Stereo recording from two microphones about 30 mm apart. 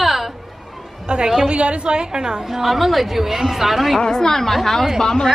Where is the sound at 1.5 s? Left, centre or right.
Right.